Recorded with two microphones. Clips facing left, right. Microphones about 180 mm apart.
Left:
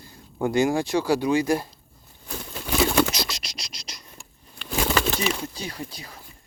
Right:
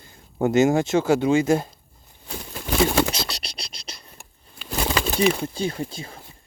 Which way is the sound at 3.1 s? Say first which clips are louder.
Right 1 dB; 30° right (ahead or behind).